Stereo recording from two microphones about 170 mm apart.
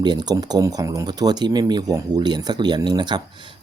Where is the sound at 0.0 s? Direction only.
25° right (ahead or behind).